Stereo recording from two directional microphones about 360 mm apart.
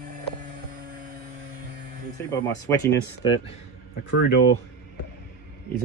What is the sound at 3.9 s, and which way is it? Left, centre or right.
Speech, left.